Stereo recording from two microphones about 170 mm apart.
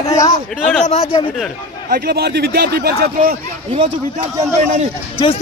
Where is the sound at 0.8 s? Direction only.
40° left (ahead or behind).